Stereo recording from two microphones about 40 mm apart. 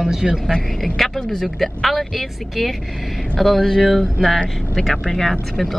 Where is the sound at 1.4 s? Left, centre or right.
Centre.